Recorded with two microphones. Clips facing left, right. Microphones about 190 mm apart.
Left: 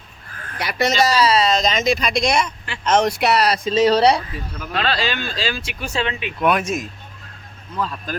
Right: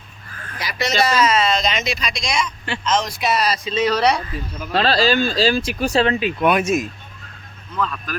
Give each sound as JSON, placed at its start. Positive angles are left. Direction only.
{"t": 0.6, "sound": "speech", "side_deg": 55}
{"t": 3.7, "sound": "speech", "side_deg": 35}
{"t": 4.7, "sound": "speech", "side_deg": -35}
{"t": 6.4, "sound": "speech", "side_deg": 0}
{"t": 7.8, "sound": "speech", "side_deg": 35}